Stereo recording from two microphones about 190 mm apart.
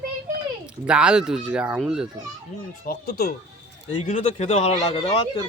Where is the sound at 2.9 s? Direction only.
55° left (ahead or behind).